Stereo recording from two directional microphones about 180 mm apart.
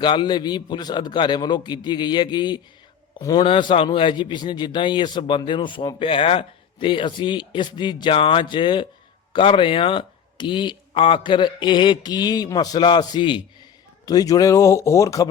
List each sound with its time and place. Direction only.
0.0 s a man's voice: 25° left (ahead or behind)